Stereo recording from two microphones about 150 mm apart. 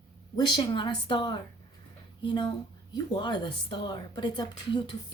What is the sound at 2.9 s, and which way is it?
A woman's voice, 30° left (ahead or behind).